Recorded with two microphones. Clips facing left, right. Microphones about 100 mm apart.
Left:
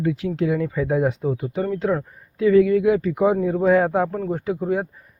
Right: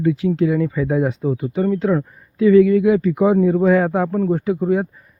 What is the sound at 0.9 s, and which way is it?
Speech, 5° left (ahead or behind).